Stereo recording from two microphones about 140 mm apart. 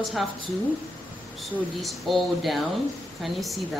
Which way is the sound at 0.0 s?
Centre (ahead or behind).